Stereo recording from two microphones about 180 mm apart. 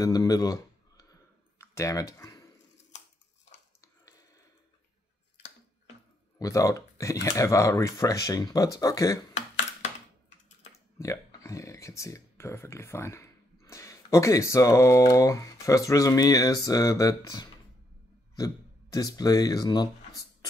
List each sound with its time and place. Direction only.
0.0 s speech: 20° left (ahead or behind)
1.6 s a sound: 15° left (ahead or behind)
6.4 s speech: 20° left (ahead or behind)
10.7 s speech: 15° left (ahead or behind)